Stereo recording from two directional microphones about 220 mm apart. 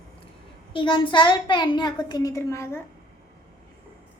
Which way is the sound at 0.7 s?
20° left (ahead or behind).